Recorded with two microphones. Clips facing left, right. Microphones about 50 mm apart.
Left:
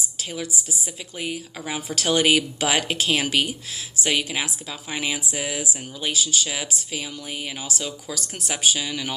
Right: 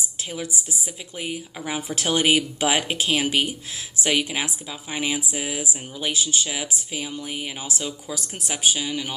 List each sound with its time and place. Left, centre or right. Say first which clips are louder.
1.1 s speech: left 1 dB; centre
5.9 s speech: even; right
6.4 s speech: even; centre